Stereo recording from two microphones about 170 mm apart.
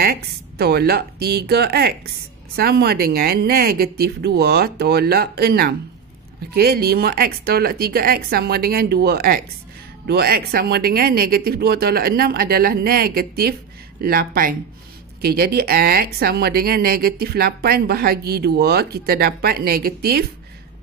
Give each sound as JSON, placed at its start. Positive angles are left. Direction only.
{"t": 0.0, "sound": "a woman's voice", "side_deg": -70}